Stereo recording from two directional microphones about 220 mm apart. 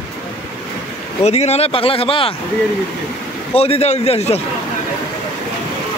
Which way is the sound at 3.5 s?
25° left (ahead or behind).